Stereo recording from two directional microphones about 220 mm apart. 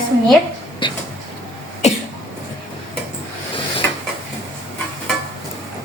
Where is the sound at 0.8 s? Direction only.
20° left (ahead or behind).